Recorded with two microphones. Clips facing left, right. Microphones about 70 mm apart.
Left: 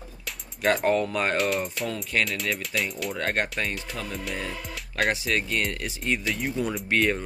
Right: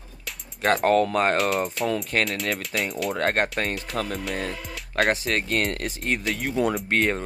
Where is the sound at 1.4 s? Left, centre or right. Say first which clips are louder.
Right 2 dB; centre.